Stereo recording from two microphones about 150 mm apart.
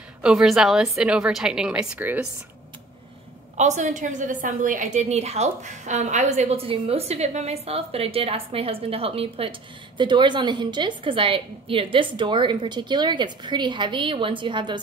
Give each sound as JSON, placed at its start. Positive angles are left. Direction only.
{"t": 0.2, "sound": "a woman's voice", "side_deg": -5}
{"t": 3.5, "sound": "a woman's voice", "side_deg": -50}